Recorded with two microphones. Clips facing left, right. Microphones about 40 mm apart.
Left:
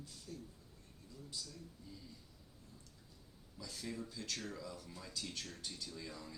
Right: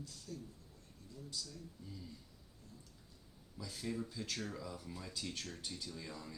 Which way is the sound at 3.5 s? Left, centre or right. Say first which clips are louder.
Right 3 dB; centre.